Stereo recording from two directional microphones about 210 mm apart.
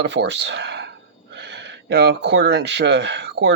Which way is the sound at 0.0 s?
55° right (ahead or behind).